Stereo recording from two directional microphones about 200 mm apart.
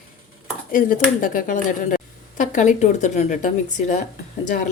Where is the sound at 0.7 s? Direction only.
45° left (ahead or behind).